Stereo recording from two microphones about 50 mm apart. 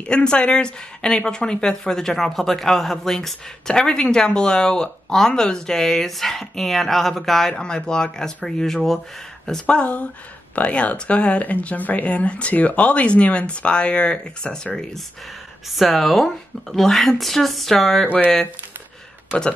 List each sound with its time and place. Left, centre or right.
0.0 s speech: centre
7.5 s speech: centre
9.7 s speech: left
15.7 s speech: centre